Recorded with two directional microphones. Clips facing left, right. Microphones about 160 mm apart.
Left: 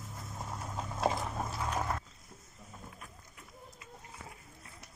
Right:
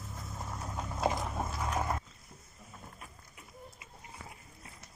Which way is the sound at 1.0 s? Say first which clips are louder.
Even; 5° right (ahead or behind).